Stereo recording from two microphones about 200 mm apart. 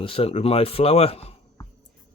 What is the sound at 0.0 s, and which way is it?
Speech, 30° left (ahead or behind).